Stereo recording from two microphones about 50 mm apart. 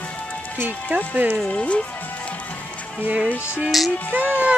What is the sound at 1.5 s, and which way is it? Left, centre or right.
Speech, left.